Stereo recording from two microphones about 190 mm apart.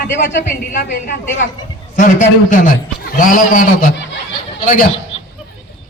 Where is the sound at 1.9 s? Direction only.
45° left (ahead or behind).